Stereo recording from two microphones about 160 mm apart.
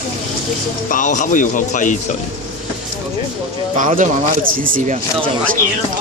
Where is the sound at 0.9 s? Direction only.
55° left (ahead or behind).